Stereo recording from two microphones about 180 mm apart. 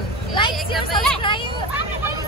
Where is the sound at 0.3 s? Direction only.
25° left (ahead or behind).